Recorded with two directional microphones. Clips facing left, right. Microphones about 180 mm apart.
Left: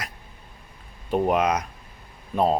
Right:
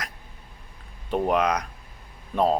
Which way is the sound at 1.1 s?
5° left (ahead or behind).